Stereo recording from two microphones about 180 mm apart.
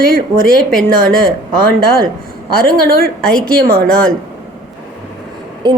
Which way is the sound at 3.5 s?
55° right (ahead or behind).